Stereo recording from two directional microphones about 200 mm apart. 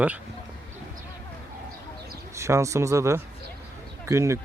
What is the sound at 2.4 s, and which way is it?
Speech, 15° right (ahead or behind).